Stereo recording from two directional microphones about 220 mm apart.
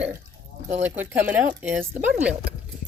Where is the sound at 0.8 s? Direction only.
10° right (ahead or behind).